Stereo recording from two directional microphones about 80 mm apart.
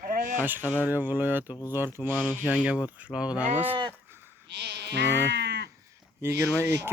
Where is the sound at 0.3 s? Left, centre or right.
Right.